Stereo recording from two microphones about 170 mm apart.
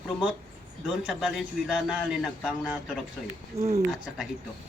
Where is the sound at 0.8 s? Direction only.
5° right (ahead or behind).